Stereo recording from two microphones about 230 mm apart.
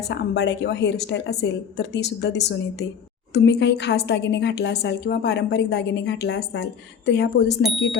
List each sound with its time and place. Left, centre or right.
0.1 s a woman's voice: left